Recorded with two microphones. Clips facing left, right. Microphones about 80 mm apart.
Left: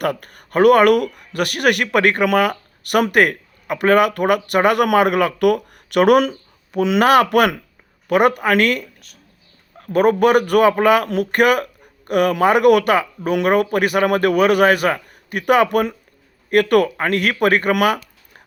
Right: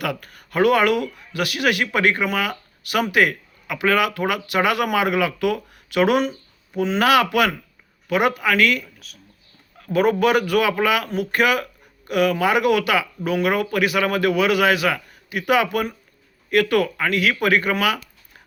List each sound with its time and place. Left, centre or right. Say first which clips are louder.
0.0 s speech: left 5 dB; left
6.7 s speech: left 5 dB; left
7.0 s speech: left 4 dB; left
7.3 s speech: left 4 dB; left
9.0 s speech: right 3 dB; centre
9.7 s speech: left 3 dB; left